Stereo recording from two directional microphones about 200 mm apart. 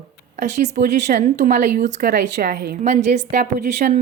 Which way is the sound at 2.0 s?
55° right (ahead or behind).